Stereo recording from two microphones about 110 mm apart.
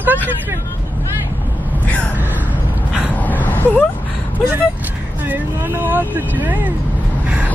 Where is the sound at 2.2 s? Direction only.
15° right (ahead or behind).